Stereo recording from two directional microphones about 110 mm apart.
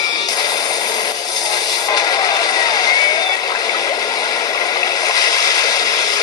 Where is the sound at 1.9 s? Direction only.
35° left (ahead or behind).